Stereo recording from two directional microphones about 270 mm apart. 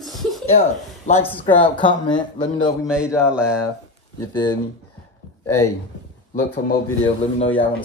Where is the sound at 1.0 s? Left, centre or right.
Left.